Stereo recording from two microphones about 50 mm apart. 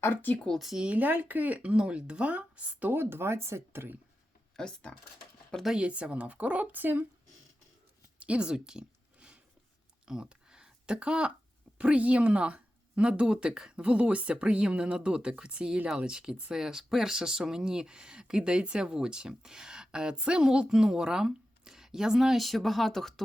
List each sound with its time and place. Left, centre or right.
0.0 s speech: left
0.9 s speech: right
2.9 s speech: right
4.5 s speech: centre
5.7 s speech: right
8.2 s speech: right
10.1 s a sound: centre
11.8 s speech: right; by 23.2 s centre